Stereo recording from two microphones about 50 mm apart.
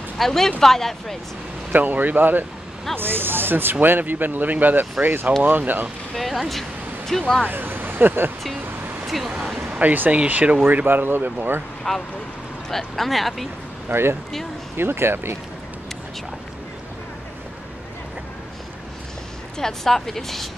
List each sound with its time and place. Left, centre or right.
0.2 s speech: centre
1.7 s speech: right
6.1 s speech: centre
7.1 s speech: centre
7.4 s speech: right
9.0 s a sound: centre
9.8 s speech: right
10.6 s speech: right
11.9 s speech: centre
14.8 s speech: right
19.6 s speech: centre